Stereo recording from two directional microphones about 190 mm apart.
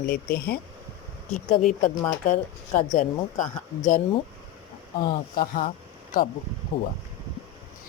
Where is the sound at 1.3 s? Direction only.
Centre (ahead or behind).